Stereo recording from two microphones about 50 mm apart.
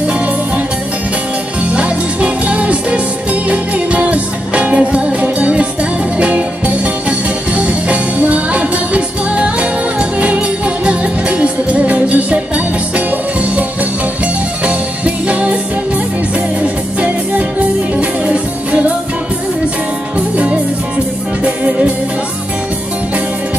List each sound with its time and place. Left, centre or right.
1.6 s music: right
14.2 s music: right
16.6 s music: right
20.2 s music: right